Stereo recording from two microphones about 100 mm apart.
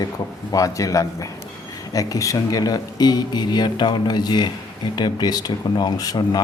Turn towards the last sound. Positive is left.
turn(degrees=40)  # may be behind; listen again after turning